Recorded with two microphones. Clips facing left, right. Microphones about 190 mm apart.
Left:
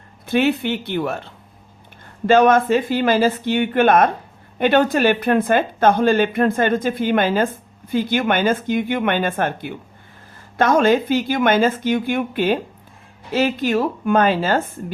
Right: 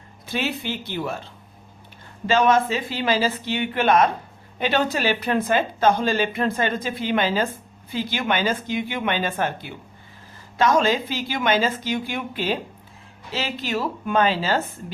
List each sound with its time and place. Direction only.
0.3 s a woman's voice: 60° left (ahead or behind)